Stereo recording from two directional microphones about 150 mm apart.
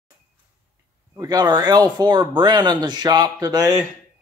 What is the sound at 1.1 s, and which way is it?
Speech, 25° right (ahead or behind).